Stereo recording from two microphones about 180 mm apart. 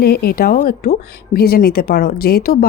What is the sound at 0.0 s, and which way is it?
Speech, 60° left (ahead or behind).